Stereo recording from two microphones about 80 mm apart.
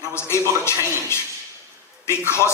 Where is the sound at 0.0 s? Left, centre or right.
Left.